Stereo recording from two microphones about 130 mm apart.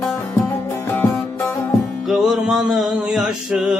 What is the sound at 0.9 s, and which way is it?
Music, 15° left (ahead or behind).